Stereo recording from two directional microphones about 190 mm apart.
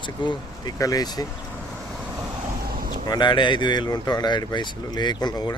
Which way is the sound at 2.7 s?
50° right (ahead or behind).